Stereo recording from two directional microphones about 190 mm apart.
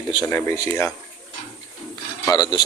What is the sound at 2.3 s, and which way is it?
Speech, 20° left (ahead or behind).